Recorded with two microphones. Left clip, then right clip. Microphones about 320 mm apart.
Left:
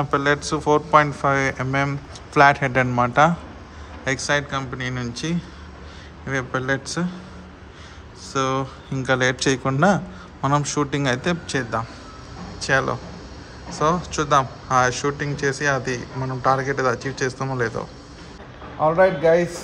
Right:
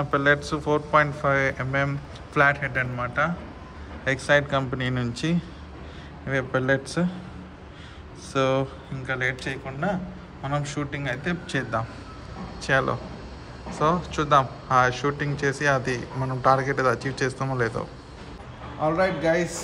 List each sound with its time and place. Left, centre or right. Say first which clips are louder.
0.0 s a man's voice: left 1 dB; centre
8.3 s a man's voice: left 1 dB; centre
18.8 s a man's voice: left 6 dB; left